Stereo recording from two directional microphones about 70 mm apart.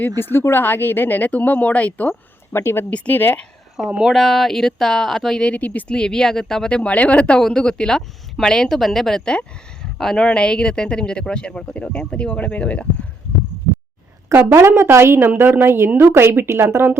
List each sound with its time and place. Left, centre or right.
0.2 s speech: left
2.5 s speech: left
2.9 s speech: left
3.8 s speech: centre
4.1 s speech: centre
5.4 s speech: centre
14.6 s a woman's voice: right